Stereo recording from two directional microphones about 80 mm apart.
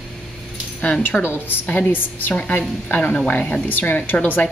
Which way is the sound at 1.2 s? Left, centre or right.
Left.